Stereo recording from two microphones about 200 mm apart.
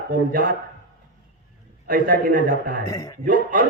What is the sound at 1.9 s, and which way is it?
Speech, 45° right (ahead or behind).